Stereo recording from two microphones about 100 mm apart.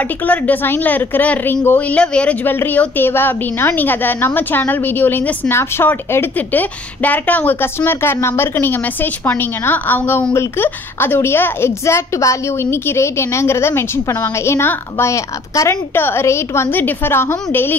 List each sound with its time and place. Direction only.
0.3 s a woman's voice: 15° left (ahead or behind)